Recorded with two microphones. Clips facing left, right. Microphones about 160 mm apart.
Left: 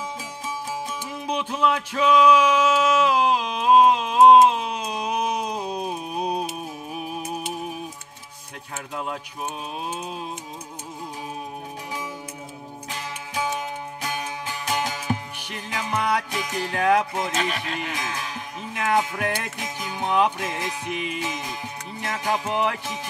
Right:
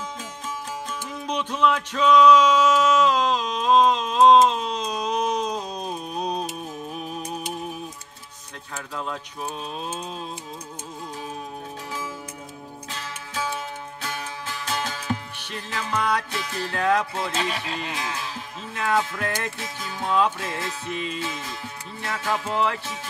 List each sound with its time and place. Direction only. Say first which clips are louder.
1.2 s music: right 1 dB; 10° left (ahead or behind)
8.7 s music: left 1 dB; 20° left (ahead or behind)
12.9 s music: left 3 dB; 15° left (ahead or behind)
17.5 s speech: left 1 dB; 30° right (ahead or behind)
18.7 s music: left 1 dB; 15° left (ahead or behind)